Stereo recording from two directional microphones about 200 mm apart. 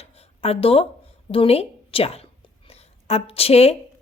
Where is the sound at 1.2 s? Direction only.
30° left (ahead or behind).